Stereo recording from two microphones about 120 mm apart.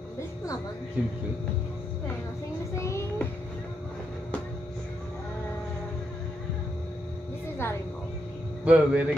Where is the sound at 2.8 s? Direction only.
25° left (ahead or behind).